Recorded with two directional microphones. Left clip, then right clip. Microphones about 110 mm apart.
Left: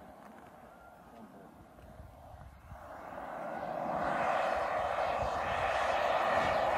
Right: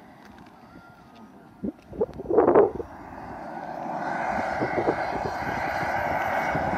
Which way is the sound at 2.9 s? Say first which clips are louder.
Right 4 dB; 15° left (ahead or behind).